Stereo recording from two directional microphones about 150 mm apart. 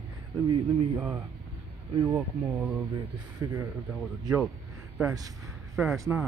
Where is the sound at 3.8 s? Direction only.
5° left (ahead or behind).